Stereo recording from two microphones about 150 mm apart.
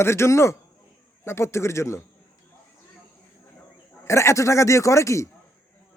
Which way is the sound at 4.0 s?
20° left (ahead or behind).